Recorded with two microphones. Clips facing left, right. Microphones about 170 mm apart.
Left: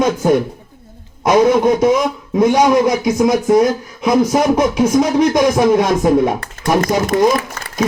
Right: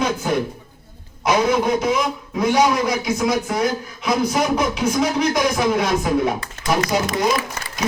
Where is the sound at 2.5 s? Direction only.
45° left (ahead or behind).